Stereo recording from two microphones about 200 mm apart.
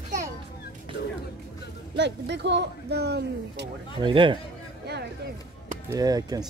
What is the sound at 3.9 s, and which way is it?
Speech, 25° right (ahead or behind).